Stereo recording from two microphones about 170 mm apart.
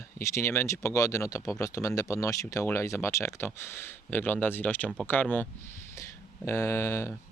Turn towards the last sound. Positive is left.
turn(degrees=15)  # may be behind; listen again after turning